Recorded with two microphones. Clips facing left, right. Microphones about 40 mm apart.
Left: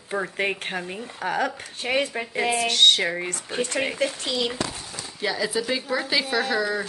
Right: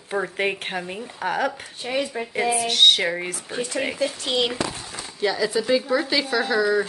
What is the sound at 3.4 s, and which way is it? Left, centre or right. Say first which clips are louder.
Speech: left 2 dB; left.